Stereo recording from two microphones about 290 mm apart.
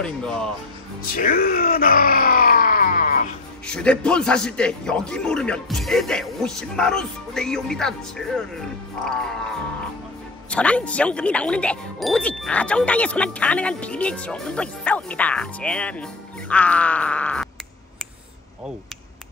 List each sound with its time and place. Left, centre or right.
0.0 s speech: centre
1.1 s groan: left
3.6 s speech: centre
10.5 s speech: centre